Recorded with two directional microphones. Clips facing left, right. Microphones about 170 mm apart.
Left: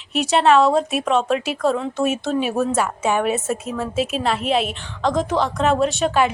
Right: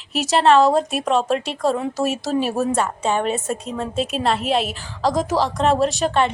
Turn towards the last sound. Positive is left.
turn(degrees=5)  # may be behind; listen again after turning